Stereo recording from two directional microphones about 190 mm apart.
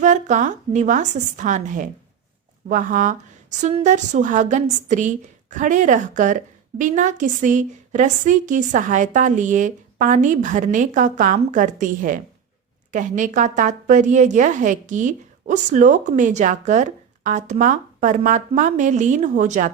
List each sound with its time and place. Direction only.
0.0 s a woman's voice: 40° right (ahead or behind)